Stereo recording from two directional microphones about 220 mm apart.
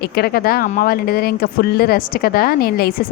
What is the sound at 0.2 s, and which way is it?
Speech, 45° left (ahead or behind).